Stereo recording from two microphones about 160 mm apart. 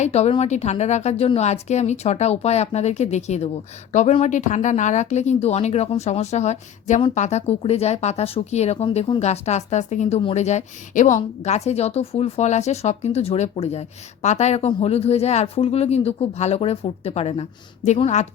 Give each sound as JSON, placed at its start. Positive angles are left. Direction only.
{"t": 0.0, "sound": "speech", "side_deg": 40}